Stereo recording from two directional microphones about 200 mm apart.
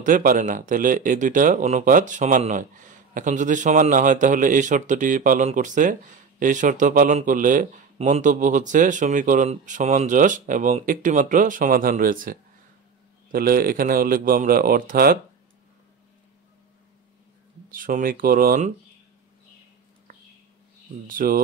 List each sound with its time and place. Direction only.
0.0 s speech: 45° right (ahead or behind)
17.6 s speech: 45° right (ahead or behind)
21.2 s speech: 45° right (ahead or behind)